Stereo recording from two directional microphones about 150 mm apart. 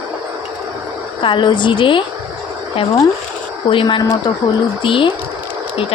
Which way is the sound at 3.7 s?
35° left (ahead or behind).